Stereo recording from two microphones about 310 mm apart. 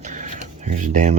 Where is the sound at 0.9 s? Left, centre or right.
Right.